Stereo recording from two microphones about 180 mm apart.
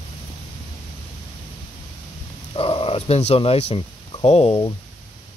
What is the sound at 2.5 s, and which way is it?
Speech, 30° left (ahead or behind).